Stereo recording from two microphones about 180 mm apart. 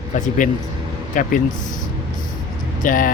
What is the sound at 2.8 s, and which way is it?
Speech, 50° left (ahead or behind).